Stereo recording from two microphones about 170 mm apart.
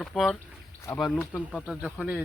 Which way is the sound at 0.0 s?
5° left (ahead or behind).